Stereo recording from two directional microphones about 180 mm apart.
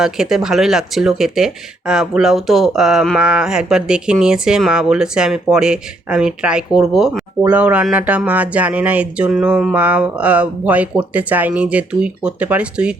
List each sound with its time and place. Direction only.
0.0 s speech: centre (ahead or behind)